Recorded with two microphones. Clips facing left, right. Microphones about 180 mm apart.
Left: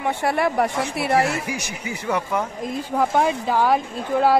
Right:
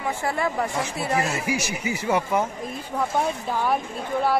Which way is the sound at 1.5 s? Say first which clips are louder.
Right 3 dB; 5° right (ahead or behind).